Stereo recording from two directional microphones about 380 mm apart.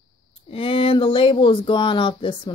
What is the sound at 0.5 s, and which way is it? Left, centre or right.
A woman's voice, centre.